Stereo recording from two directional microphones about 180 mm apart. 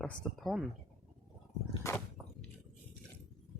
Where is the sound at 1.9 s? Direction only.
15° left (ahead or behind).